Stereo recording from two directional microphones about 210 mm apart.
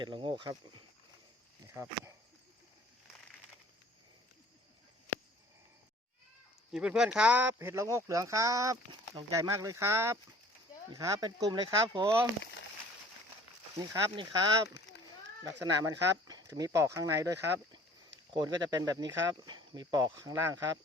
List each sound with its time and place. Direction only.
0.0 s speech: 25° right (ahead or behind)
1.6 s speech: 15° right (ahead or behind)
6.7 s speech: 5° right (ahead or behind); by 12.1 s 20° right (ahead or behind)
13.7 s speech: 20° right (ahead or behind)
14.9 s a sound: 55° left (ahead or behind)
15.4 s speech: 15° right (ahead or behind)